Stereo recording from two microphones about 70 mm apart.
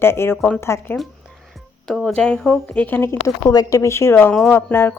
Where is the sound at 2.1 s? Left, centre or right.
Centre.